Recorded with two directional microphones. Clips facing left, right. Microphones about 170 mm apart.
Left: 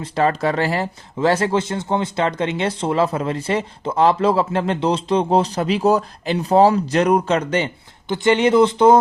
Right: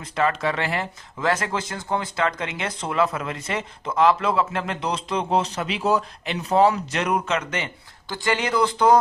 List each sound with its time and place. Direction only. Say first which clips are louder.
0.0 s speech: left 4 dB; 35° left (ahead or behind)